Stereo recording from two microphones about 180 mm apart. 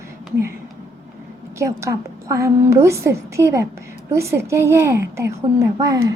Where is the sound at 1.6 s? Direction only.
15° right (ahead or behind).